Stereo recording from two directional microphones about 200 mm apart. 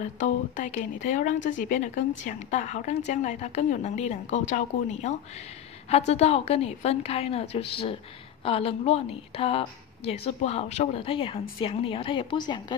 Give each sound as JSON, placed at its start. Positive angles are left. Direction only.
{"t": 0.2, "sound": "a woman's voice", "side_deg": 40}